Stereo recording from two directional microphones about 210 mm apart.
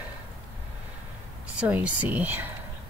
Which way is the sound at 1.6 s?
5° right (ahead or behind).